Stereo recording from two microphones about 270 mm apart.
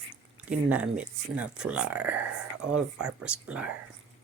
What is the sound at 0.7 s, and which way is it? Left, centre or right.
Speech, centre.